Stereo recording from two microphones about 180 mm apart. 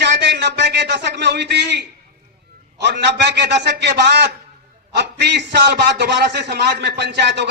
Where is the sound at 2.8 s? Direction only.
70° right (ahead or behind).